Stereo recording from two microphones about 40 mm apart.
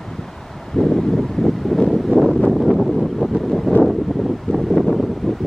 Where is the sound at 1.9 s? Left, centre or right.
Centre.